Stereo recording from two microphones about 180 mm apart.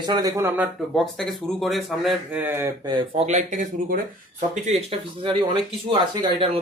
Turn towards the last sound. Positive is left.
turn(degrees=-30)  # may be behind; listen again after turning